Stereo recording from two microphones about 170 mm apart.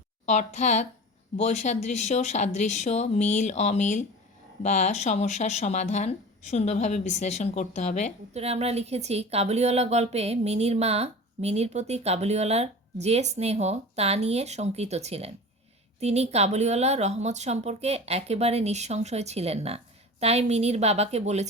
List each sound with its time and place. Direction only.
0.3 s speech: 45° left (ahead or behind)
8.3 s speech: 40° right (ahead or behind)